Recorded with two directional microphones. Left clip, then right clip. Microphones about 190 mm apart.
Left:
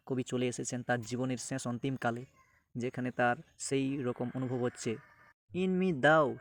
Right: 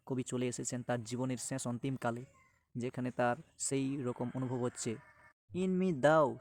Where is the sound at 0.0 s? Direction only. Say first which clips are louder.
Left 3 dB; 5° left (ahead or behind).